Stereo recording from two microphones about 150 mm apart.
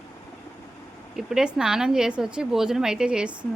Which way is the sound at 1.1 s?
5° right (ahead or behind).